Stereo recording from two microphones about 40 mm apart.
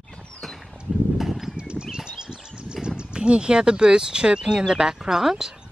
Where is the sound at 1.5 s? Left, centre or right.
Right.